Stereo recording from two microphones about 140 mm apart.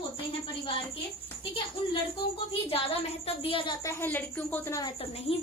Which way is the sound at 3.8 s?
15° left (ahead or behind).